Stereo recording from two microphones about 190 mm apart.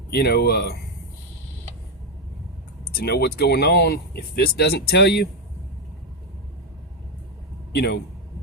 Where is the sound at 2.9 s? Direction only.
55° left (ahead or behind).